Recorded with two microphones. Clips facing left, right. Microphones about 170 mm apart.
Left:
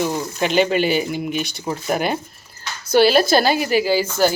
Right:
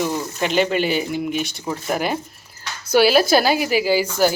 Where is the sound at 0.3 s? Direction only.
Centre (ahead or behind).